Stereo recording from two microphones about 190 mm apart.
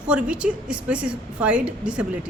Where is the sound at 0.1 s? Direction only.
5° right (ahead or behind).